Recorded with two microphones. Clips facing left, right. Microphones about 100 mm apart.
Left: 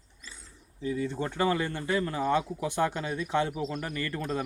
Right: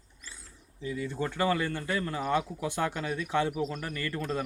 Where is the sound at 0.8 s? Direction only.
25° left (ahead or behind).